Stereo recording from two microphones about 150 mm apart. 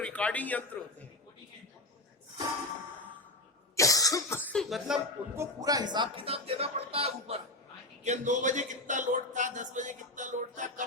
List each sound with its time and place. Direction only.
0.0 s a man's voice: 10° left (ahead or behind)
3.8 s cough: 20° left (ahead or behind)
4.6 s speech: centre (ahead or behind)
5.4 s speech: 25° right (ahead or behind); by 7.3 s 40° right (ahead or behind)
8.0 s speech: 50° right (ahead or behind)